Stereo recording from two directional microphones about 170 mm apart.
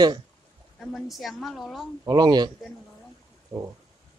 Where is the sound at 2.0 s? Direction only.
25° right (ahead or behind).